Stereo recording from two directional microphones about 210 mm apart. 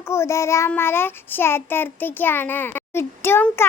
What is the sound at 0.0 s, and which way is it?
Child singing, 10° left (ahead or behind).